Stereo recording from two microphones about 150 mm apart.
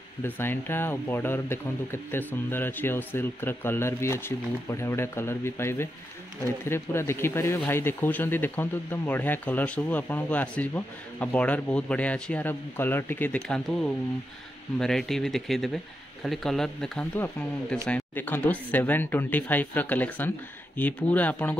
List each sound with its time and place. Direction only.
0.2 s speech: 15° left (ahead or behind)